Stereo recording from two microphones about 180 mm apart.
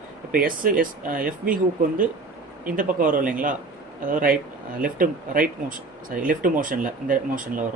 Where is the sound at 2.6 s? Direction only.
50° right (ahead or behind).